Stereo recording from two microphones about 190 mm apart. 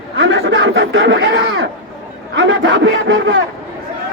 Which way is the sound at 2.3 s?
80° right.